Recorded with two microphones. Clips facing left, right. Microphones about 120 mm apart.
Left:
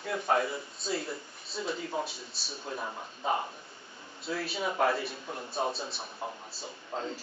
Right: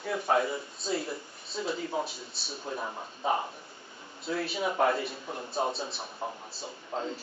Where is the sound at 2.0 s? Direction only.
Centre (ahead or behind).